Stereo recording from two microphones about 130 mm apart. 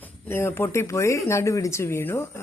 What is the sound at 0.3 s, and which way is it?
Speech, 20° left (ahead or behind).